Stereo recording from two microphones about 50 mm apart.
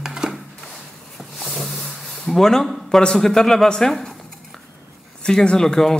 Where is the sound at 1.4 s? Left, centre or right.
Centre.